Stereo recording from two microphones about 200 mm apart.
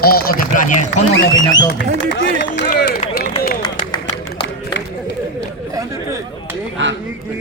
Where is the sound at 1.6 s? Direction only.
60° left (ahead or behind).